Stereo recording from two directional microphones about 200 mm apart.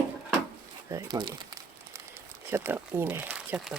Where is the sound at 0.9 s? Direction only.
15° right (ahead or behind).